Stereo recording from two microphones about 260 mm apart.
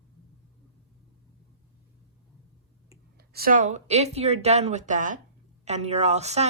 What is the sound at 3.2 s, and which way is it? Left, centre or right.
Speech, right.